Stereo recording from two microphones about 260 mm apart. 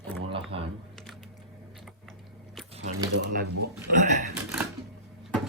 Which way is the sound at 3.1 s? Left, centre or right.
Right.